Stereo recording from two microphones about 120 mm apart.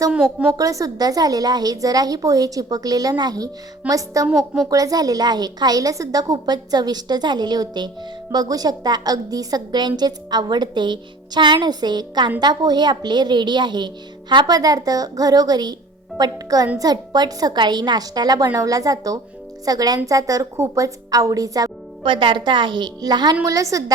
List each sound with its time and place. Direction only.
0.1 s a woman's voice: 10° right (ahead or behind)
0.5 s a woman's voice: 30° right (ahead or behind)
4.3 s a child's voice: centre (ahead or behind)
4.7 s a woman's voice: 30° right (ahead or behind)
22.0 s a woman's voice: 45° right (ahead or behind); by 23.8 s 30° right (ahead or behind)